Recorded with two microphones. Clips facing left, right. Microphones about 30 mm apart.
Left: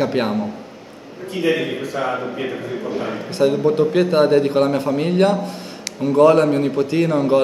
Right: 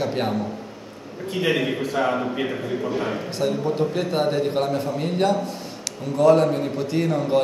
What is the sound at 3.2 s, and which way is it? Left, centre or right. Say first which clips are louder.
A man's voice: left 7 dB; left.